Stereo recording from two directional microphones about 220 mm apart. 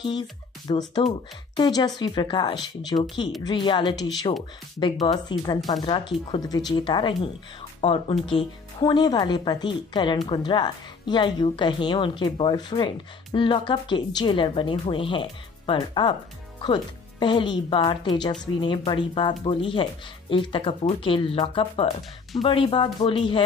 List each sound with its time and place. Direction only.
0.7 s speech: 20° left (ahead or behind)